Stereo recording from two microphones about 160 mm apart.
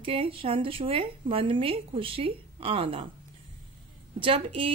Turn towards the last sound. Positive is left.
turn(degrees=-35)  # may be behind; listen again after turning